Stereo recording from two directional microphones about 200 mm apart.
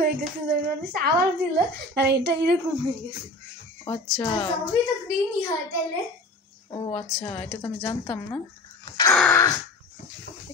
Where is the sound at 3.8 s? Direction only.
20° left (ahead or behind).